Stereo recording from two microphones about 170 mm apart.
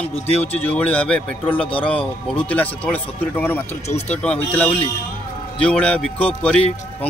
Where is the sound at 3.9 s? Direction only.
40° left (ahead or behind).